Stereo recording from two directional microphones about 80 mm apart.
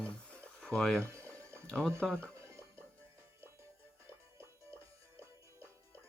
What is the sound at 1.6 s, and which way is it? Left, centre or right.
Speech, centre.